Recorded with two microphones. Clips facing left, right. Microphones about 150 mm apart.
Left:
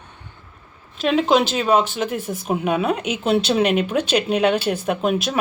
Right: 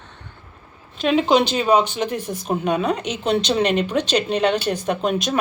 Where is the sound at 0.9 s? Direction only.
Centre (ahead or behind).